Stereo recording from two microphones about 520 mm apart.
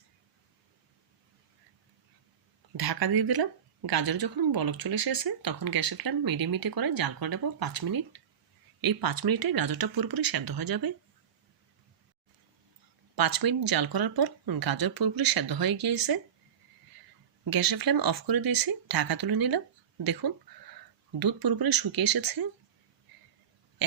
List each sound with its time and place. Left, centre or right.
2.7 s speech: right
13.1 s speech: right
17.5 s speech: right
21.2 s speech: right